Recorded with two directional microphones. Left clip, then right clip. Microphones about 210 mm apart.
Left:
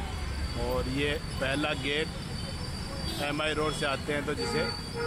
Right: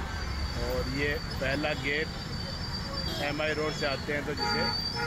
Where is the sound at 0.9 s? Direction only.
20° left (ahead or behind).